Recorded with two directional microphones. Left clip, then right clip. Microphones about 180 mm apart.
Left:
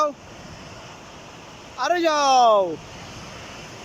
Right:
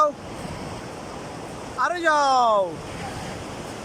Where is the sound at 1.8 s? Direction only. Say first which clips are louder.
Even; 15° left (ahead or behind).